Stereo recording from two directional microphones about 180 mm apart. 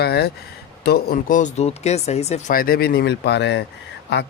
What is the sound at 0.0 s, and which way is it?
Speech, 65° left (ahead or behind).